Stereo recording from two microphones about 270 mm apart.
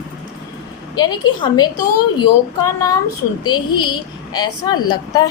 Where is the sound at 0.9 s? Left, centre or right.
Centre.